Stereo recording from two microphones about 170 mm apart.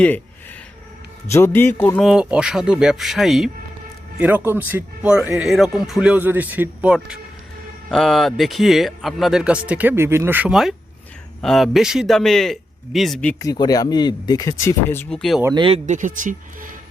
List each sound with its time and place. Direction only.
1.3 s a man's voice: 15° left (ahead or behind)
2.0 s speech: 5° right (ahead or behind)
13.4 s speech: 20° left (ahead or behind); by 15.4 s 5° left (ahead or behind)
15.5 s speech: 30° right (ahead or behind)
15.9 s speech: 50° right (ahead or behind)